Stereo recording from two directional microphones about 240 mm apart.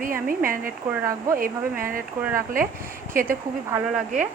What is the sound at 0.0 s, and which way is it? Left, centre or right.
Speech, right.